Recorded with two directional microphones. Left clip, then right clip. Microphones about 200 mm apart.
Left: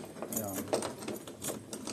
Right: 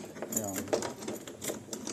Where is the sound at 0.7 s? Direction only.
25° right (ahead or behind).